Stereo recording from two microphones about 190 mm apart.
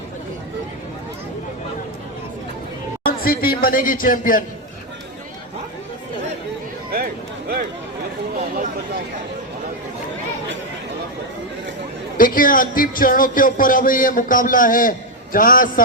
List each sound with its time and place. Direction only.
3.1 s speech: 50° left (ahead or behind)
6.9 s a sound: 50° right (ahead or behind)
12.1 s speech: 45° left (ahead or behind)